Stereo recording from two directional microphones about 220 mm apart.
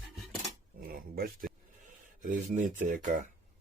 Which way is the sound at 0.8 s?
40° right (ahead or behind).